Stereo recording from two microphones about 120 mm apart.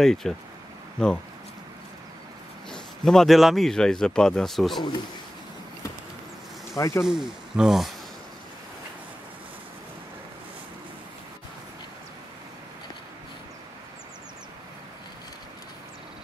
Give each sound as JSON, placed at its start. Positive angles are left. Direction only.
{"t": 0.0, "sound": "a man's voice", "side_deg": 5}
{"t": 2.7, "sound": "a man's voice", "side_deg": 5}
{"t": 6.8, "sound": "speech", "side_deg": 25}
{"t": 7.1, "sound": "a man's voice", "side_deg": -5}